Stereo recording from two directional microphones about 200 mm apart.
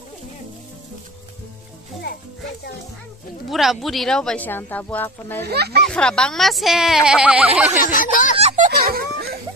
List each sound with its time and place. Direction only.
3.4 s speech: centre (ahead or behind)
5.4 s speech: 55° right (ahead or behind)
5.8 s speech: 5° left (ahead or behind)
7.8 s a sound: 40° left (ahead or behind)
8.4 s music: 35° right (ahead or behind)